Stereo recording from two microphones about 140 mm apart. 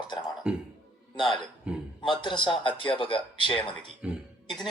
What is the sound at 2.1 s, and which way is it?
Speech, 35° left (ahead or behind).